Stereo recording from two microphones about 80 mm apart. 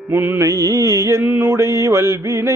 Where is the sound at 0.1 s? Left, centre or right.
Right.